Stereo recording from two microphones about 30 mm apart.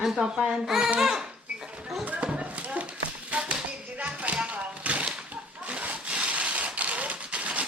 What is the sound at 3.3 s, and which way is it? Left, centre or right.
Tap, right.